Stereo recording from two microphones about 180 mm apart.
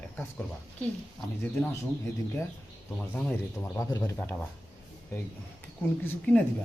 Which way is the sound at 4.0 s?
5° left (ahead or behind).